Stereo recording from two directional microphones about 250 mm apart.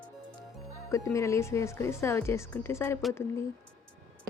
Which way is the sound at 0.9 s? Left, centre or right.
Centre.